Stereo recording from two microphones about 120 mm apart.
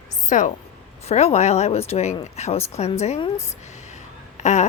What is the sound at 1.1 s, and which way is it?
A woman's voice, 60° left (ahead or behind).